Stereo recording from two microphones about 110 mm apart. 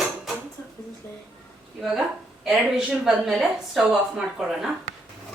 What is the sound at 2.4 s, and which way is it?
A woman's voice, 5° right (ahead or behind).